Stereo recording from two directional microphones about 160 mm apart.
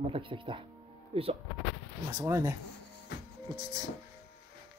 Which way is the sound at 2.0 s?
20° right (ahead or behind).